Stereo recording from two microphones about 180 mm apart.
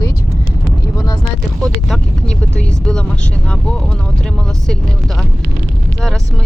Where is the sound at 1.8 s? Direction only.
5° left (ahead or behind).